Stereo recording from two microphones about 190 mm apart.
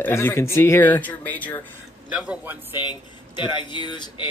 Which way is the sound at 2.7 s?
25° left (ahead or behind).